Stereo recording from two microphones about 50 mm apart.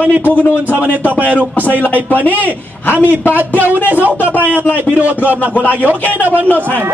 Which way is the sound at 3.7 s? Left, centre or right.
Left.